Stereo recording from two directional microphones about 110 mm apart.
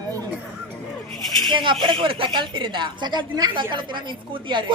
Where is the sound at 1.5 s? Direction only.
45° right (ahead or behind).